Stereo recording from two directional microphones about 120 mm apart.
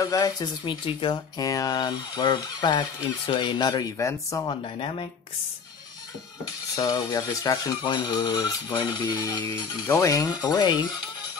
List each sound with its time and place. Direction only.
0.0 s speech: 30° left (ahead or behind)
1.4 s speech: 30° left (ahead or behind)
4.0 s speech: 25° left (ahead or behind)
4.5 s speech: 50° left (ahead or behind)
6.7 s speech: 35° left (ahead or behind)
9.8 s speech: 25° left (ahead or behind)